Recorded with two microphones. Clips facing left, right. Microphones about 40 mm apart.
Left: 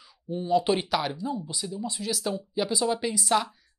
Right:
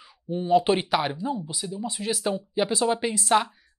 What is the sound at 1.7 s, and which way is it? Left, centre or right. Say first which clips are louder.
Speech: right 3 dB; right.